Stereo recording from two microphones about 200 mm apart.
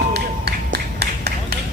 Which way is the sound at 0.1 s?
55° right (ahead or behind).